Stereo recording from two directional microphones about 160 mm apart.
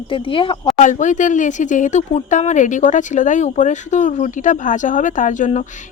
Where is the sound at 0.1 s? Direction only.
35° left (ahead or behind).